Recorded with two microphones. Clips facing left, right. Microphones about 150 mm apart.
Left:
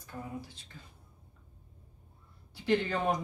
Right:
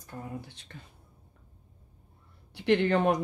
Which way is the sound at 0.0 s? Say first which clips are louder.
Right 1 dB; 60° right (ahead or behind).